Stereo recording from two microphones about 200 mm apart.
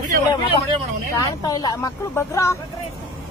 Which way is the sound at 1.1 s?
20° left (ahead or behind).